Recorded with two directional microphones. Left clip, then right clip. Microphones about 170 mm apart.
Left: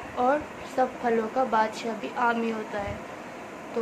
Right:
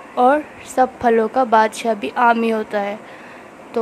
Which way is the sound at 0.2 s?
55° right (ahead or behind).